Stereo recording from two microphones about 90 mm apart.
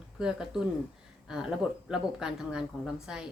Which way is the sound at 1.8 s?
5° right (ahead or behind).